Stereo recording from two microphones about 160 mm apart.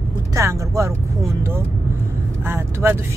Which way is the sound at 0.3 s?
20° right (ahead or behind).